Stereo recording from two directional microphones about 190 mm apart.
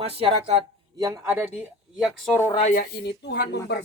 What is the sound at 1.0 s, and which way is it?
Speech, 15° right (ahead or behind).